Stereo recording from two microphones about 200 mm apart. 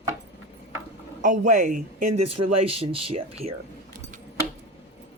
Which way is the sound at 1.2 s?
40° right (ahead or behind).